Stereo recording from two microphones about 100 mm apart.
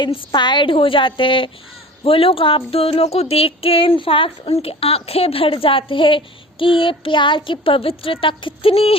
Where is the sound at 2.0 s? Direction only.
70° left (ahead or behind).